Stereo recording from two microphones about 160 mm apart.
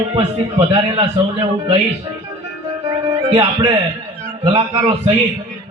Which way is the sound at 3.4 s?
35° right (ahead or behind).